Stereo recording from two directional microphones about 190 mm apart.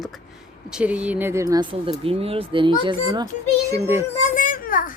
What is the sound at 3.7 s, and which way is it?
Speech, 15° right (ahead or behind).